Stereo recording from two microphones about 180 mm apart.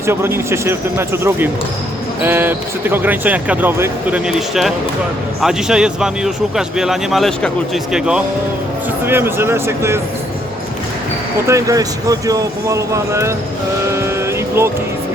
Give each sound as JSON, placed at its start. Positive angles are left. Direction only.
{"t": 0.0, "sound": "speech", "side_deg": -15}
{"t": 11.4, "sound": "speech", "side_deg": -20}
{"t": 14.0, "sound": "vehicle", "side_deg": -15}